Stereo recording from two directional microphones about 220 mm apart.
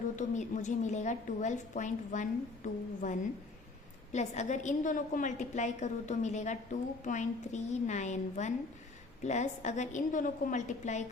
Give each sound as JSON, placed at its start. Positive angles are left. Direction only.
{"t": 0.2, "sound": "a woman's voice", "side_deg": 35}